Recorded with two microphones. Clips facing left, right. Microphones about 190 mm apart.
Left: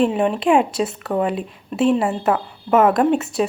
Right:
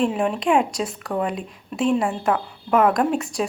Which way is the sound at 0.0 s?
Centre (ahead or behind).